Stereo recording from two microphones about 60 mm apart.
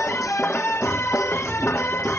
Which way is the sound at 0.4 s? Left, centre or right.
Left.